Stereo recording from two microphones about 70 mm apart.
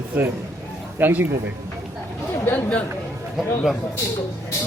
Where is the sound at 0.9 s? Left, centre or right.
Right.